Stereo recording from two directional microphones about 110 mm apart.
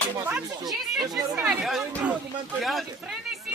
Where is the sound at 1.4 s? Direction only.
Centre (ahead or behind).